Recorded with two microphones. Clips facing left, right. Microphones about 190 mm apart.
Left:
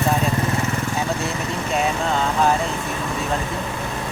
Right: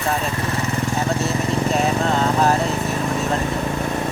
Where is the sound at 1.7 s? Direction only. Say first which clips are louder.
Left 1 dB; centre (ahead or behind).